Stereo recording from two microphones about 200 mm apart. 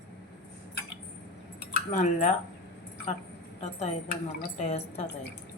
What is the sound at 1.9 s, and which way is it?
Speech, 35° left (ahead or behind).